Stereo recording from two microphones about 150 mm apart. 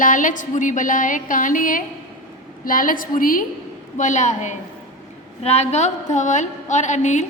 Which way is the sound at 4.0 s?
55° left (ahead or behind).